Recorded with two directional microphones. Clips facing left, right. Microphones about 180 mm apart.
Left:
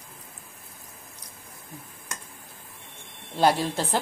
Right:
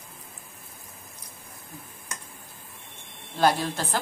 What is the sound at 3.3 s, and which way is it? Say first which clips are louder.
Speech: left 1 dB; 25° left (ahead or behind).